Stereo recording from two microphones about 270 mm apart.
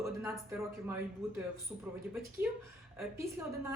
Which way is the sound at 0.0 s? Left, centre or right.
Centre.